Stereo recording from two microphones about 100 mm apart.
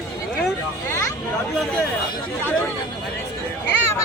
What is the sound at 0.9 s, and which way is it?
Hubbub, 30° left (ahead or behind).